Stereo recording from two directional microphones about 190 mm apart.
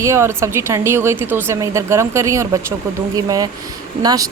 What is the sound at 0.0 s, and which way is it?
A woman's voice, 15° right (ahead or behind).